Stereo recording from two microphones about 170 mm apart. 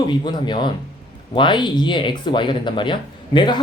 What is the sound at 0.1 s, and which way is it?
Speech, 25° left (ahead or behind).